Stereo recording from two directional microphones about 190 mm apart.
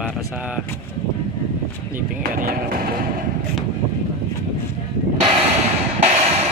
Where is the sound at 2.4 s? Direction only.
50° right (ahead or behind).